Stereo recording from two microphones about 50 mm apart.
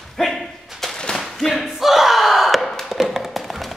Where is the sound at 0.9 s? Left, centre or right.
Centre.